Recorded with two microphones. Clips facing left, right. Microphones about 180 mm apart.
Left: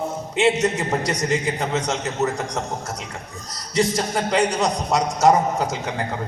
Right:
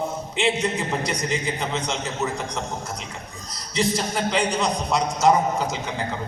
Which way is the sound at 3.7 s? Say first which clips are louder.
Left 3 dB; 45° left (ahead or behind).